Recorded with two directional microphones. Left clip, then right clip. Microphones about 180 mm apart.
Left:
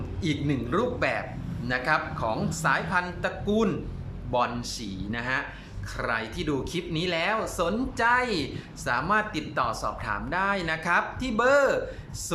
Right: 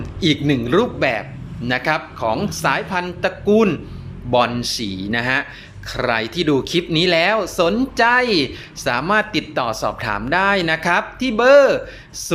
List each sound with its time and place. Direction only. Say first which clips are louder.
0.2 s speech: right 12 dB; 20° right (ahead or behind)